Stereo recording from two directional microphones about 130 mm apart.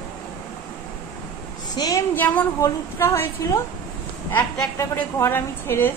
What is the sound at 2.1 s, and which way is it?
A woman's voice, 10° left (ahead or behind).